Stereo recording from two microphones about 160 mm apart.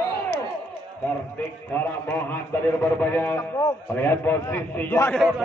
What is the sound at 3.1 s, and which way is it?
A man's voice, 15° left (ahead or behind).